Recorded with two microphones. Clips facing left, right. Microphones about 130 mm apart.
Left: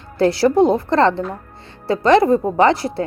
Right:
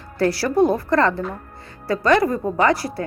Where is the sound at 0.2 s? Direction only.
25° left (ahead or behind).